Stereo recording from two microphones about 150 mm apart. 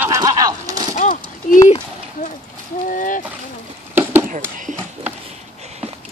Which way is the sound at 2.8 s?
60° left (ahead or behind).